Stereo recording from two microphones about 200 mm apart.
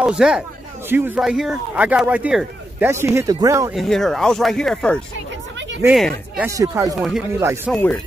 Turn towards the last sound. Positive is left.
turn(degrees=10)  # may be behind; listen again after turning